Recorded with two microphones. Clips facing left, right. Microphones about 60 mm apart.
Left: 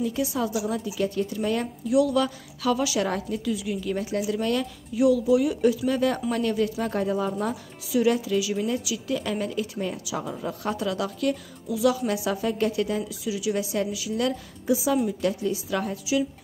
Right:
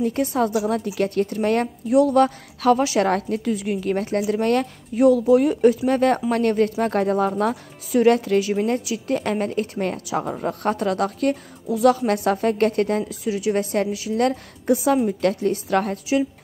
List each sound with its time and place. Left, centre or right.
0.0 s a woman's voice: right
3.0 s a woman's voice: right